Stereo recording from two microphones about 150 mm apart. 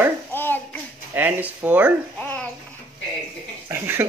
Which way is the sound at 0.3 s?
15° left (ahead or behind).